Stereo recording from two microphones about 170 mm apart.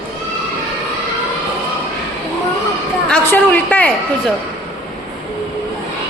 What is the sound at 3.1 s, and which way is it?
Speech, 10° left (ahead or behind).